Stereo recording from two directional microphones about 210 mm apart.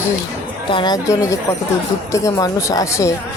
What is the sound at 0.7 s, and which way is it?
Speech, 20° left (ahead or behind).